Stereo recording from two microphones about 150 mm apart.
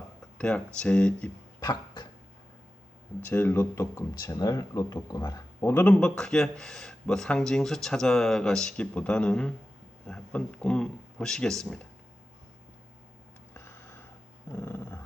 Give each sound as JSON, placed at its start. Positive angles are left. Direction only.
{"t": 0.3, "sound": "speech", "side_deg": 5}
{"t": 1.6, "sound": "cough", "side_deg": 25}
{"t": 3.2, "sound": "speech", "side_deg": 15}
{"t": 13.5, "sound": "a sound", "side_deg": 15}
{"t": 14.5, "sound": "dog", "side_deg": 15}